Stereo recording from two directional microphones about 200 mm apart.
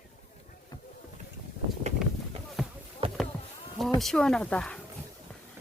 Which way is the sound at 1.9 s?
35° right (ahead or behind).